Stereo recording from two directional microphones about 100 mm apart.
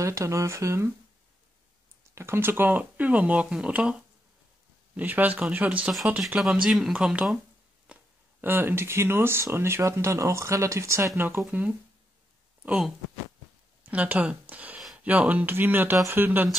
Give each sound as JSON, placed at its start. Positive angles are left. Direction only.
{"t": 0.0, "sound": "speech", "side_deg": -30}
{"t": 2.1, "sound": "speech", "side_deg": -25}
{"t": 12.6, "sound": "speech", "side_deg": -5}